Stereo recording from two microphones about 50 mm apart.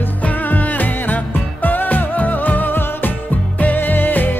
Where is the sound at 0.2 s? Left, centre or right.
Left.